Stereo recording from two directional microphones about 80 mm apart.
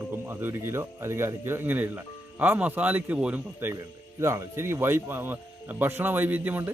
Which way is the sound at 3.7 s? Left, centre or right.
Right.